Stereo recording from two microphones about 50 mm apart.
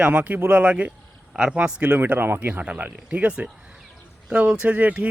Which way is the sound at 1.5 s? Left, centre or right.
Right.